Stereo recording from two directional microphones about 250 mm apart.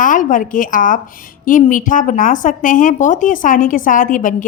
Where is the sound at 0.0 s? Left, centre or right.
Left.